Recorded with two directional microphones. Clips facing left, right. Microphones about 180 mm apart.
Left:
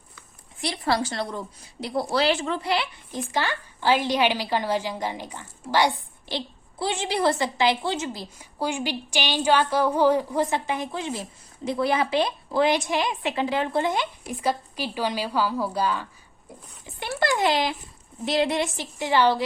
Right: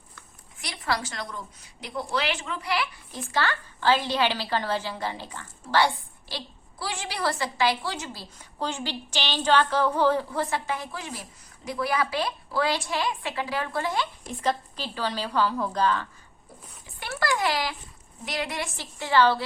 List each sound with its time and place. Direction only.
0.6 s a woman's voice: 30° left (ahead or behind); by 16.0 s 10° left (ahead or behind)
16.8 s a sound: 20° left (ahead or behind)
18.3 s a woman's voice: 25° left (ahead or behind)